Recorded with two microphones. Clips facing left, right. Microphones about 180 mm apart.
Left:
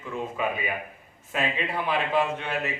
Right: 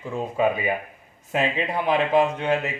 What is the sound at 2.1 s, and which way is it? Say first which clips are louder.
Speech: right 6 dB; 35° right (ahead or behind).